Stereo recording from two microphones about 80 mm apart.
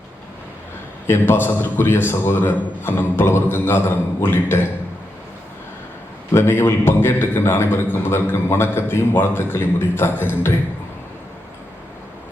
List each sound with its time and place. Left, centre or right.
1.0 s a man's voice: left
6.3 s a man's voice: left